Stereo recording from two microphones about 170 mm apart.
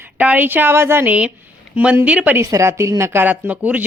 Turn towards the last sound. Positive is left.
turn(degrees=-10)  # may be behind; listen again after turning